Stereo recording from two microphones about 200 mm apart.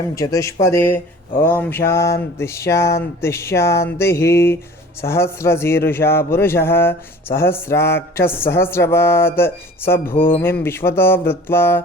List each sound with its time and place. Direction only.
0.2 s speech: 15° left (ahead or behind)